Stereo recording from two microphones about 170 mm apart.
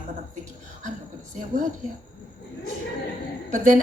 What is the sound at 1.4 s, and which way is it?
Speech, 50° right (ahead or behind).